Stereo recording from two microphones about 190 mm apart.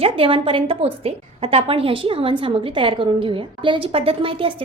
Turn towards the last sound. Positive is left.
turn(degrees=-30)  # may be behind; listen again after turning